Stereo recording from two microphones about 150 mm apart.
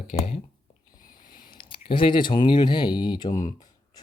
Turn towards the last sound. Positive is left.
turn(degrees=30)  # may be behind; listen again after turning